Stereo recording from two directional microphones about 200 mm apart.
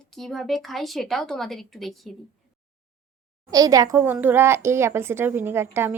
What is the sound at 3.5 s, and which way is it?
Speech, 20° right (ahead or behind).